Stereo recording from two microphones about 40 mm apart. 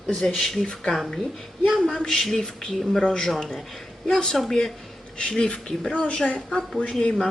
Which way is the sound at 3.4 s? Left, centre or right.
Centre.